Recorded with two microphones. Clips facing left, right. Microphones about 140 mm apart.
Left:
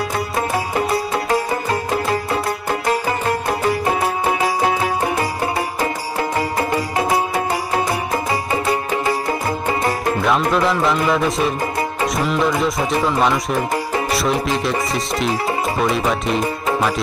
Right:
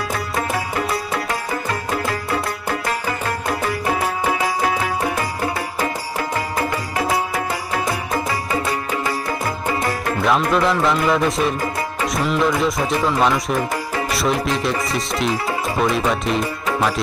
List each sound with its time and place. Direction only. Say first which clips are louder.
0.8 s music: left 4 dB; 25° left (ahead or behind)
7.0 s music: left 1 dB; 25° left (ahead or behind)
10.2 s speech: right 1 dB; centre (ahead or behind)